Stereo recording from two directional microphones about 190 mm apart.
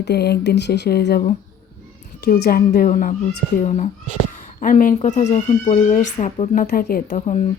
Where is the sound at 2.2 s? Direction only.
55° left (ahead or behind).